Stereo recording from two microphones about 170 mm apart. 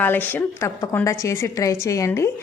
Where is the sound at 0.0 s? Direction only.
10° left (ahead or behind).